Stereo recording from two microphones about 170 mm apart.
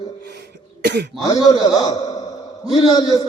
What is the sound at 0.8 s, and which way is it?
Speech, 80° right.